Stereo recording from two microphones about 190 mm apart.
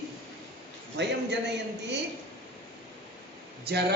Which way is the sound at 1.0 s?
65° right (ahead or behind).